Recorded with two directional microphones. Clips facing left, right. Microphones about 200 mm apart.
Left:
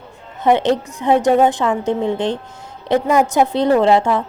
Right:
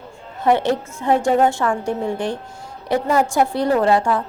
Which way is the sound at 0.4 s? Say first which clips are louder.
Left 3 dB; 20° left (ahead or behind).